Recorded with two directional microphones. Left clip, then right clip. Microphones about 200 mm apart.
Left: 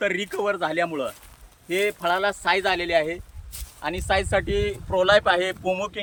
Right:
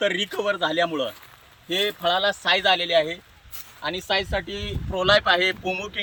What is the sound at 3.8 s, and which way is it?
Speech, 30° left (ahead or behind).